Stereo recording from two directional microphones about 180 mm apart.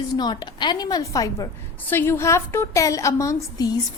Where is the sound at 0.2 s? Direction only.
25° left (ahead or behind).